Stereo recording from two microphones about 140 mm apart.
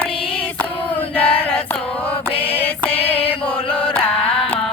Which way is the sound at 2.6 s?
10° left (ahead or behind).